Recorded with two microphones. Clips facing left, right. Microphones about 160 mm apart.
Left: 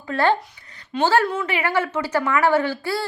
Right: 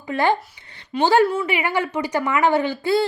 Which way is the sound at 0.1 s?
15° right (ahead or behind).